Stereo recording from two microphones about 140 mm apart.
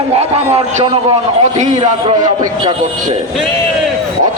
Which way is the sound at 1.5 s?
60° right (ahead or behind).